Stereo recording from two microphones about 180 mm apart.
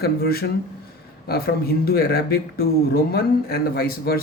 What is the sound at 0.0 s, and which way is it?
Speech, 60° left (ahead or behind).